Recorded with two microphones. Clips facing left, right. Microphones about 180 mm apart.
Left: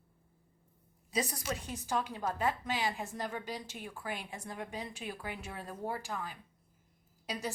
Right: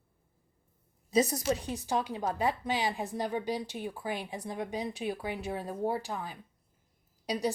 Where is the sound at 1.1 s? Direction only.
45° right (ahead or behind).